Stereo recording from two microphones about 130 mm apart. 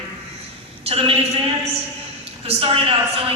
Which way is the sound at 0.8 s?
45° right (ahead or behind).